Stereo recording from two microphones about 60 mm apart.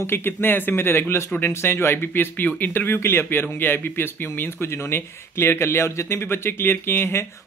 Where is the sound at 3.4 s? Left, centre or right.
Left.